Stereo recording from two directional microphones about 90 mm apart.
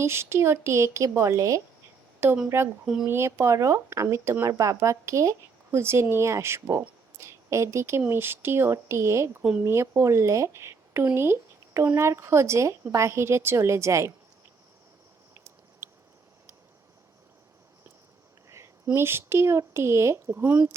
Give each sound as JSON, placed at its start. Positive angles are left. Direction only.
{"t": 0.0, "sound": "speech", "side_deg": -30}
{"t": 2.2, "sound": "speech", "side_deg": -25}
{"t": 2.8, "sound": "speech", "side_deg": -5}
{"t": 3.1, "sound": "speech", "side_deg": -30}
{"t": 15.8, "sound": "a sound", "side_deg": -30}
{"t": 18.4, "sound": "a sound", "side_deg": -35}
{"t": 18.9, "sound": "speech", "side_deg": -25}